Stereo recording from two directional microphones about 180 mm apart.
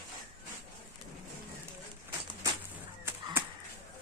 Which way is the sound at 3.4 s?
10° right (ahead or behind).